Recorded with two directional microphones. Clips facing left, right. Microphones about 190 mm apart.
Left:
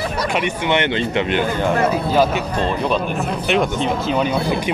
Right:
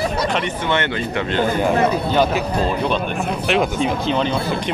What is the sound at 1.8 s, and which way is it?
Speech, 5° left (ahead or behind).